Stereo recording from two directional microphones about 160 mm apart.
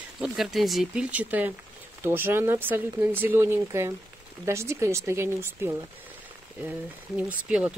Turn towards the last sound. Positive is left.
turn(degrees=-10)  # may be behind; listen again after turning